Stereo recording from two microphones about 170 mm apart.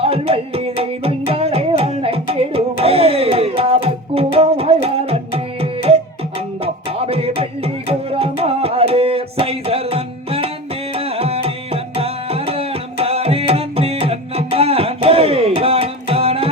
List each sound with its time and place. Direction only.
0.0 s music: 35° right (ahead or behind)
7.0 s music: 35° right (ahead or behind)